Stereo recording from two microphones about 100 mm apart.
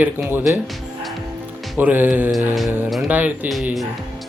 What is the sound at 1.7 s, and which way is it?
Speech, 20° right (ahead or behind).